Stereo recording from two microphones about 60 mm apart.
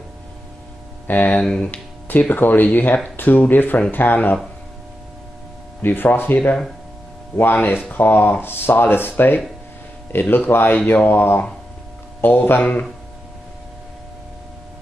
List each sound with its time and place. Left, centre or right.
1.0 s speech: left
5.8 s speech: left